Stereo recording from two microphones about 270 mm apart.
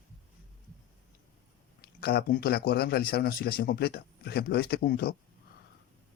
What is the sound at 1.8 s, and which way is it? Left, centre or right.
A man's voice, left.